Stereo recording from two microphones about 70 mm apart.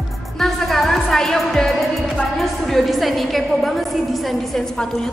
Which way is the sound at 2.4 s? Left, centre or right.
Centre.